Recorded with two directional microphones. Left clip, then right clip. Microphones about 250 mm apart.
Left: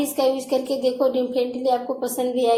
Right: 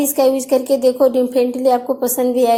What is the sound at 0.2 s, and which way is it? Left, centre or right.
A woman's voice, right.